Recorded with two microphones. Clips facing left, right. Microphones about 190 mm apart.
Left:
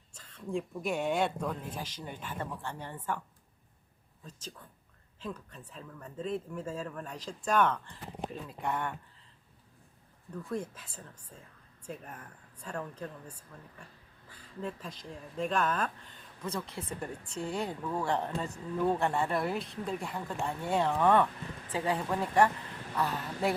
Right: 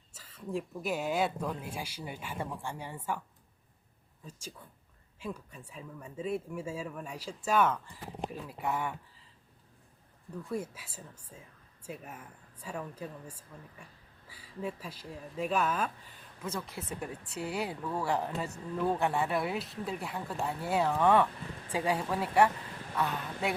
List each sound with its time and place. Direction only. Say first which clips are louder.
0.1 s speech: left 1 dB; 5° right (ahead or behind)
10.3 s speech: even; 10° right (ahead or behind)
21.7 s speech: even; 15° right (ahead or behind)